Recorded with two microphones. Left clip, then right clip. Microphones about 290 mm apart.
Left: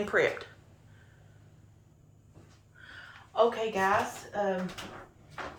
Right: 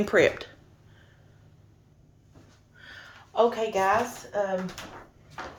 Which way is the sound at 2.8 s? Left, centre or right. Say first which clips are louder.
Right 2 dB; right.